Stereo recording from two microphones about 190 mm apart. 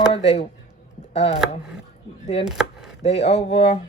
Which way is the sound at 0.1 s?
30° left (ahead or behind).